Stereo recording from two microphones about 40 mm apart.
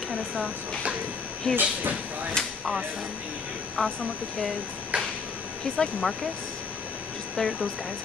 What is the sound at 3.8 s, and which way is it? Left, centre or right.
Speech, left.